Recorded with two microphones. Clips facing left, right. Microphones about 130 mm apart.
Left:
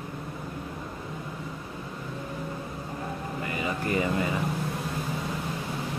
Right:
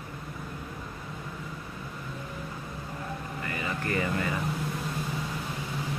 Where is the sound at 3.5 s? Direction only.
15° left (ahead or behind).